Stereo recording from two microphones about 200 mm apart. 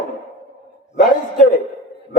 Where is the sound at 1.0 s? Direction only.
45° left (ahead or behind).